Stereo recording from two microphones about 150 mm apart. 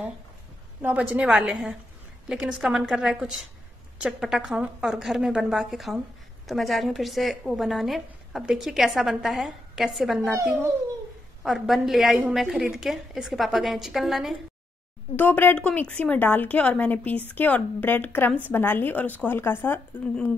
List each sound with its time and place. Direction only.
0.8 s a woman's voice: 10° right (ahead or behind)
10.3 s a child's voice: 20° right (ahead or behind)
11.4 s a woman's voice: centre (ahead or behind)
15.1 s a woman's voice: 10° left (ahead or behind)